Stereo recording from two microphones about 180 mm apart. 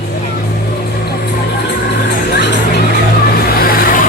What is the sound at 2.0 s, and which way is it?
Music, 70° left (ahead or behind).